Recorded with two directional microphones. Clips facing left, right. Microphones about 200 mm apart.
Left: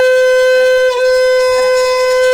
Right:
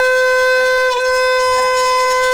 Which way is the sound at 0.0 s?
25° left (ahead or behind).